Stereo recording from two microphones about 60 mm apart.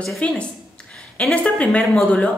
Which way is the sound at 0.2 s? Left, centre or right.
Left.